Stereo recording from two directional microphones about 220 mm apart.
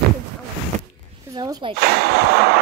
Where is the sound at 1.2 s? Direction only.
15° right (ahead or behind).